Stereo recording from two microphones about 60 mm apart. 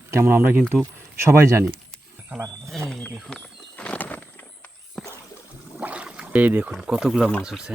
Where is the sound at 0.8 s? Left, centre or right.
Right.